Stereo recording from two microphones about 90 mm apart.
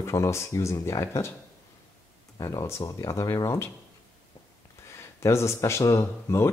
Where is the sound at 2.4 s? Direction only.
45° left (ahead or behind).